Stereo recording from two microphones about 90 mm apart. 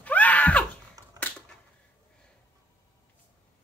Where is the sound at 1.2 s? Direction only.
40° right (ahead or behind).